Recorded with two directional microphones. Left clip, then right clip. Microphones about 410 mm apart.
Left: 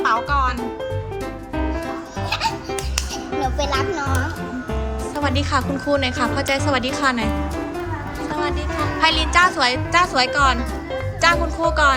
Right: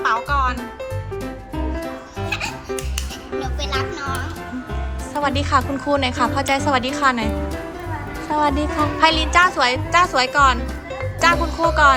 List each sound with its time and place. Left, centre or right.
0.0 s music: centre
2.3 s baby laughter: left
3.4 s music: left
5.1 s a woman's voice: centre
8.3 s a woman's voice: centre